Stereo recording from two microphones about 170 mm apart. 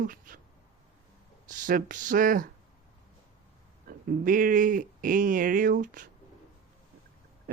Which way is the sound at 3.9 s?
55° right (ahead or behind).